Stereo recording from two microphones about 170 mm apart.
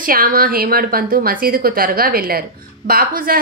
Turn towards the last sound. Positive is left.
turn(degrees=-60)  # may be behind; listen again after turning